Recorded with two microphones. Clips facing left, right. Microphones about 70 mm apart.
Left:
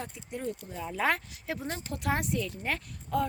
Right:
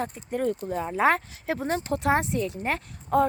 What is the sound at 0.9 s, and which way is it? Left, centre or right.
Speech, right.